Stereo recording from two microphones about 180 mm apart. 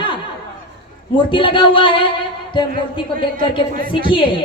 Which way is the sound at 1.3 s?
25° left (ahead or behind).